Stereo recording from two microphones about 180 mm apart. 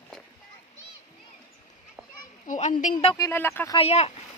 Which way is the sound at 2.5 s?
45° left (ahead or behind).